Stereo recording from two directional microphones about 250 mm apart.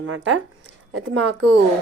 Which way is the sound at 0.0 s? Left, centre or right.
Right.